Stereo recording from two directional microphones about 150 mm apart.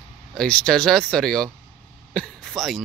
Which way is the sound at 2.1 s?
5° left (ahead or behind).